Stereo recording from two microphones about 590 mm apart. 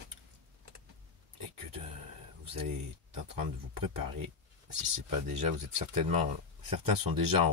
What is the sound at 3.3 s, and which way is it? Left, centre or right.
Speech, right.